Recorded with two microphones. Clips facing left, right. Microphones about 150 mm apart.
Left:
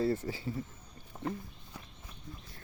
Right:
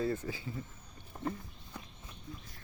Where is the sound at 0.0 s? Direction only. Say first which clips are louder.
Left 3 dB; 35° left (ahead or behind).